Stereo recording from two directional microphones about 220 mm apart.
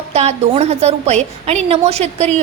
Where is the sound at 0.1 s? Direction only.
30° right (ahead or behind).